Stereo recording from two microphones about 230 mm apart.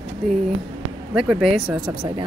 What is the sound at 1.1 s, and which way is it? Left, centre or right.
Speech, centre.